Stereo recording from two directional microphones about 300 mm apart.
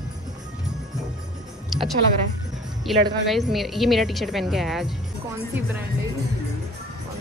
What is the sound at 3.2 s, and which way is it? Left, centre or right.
Speech, centre.